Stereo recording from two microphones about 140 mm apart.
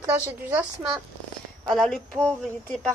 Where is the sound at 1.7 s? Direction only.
5° left (ahead or behind).